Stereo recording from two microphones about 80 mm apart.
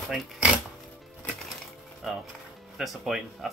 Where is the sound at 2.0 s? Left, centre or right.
Centre.